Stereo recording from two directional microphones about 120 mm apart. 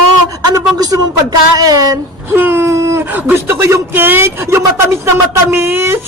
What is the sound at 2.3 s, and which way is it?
Speech, 20° right (ahead or behind).